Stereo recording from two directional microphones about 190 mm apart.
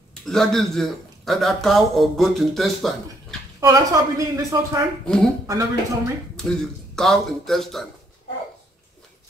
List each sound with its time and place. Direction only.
0.2 s speech: centre (ahead or behind)
3.6 s speech: 20° right (ahead or behind)
5.0 s speech: 5° left (ahead or behind)
5.5 s speech: 15° right (ahead or behind)
7.0 s speech: centre (ahead or behind)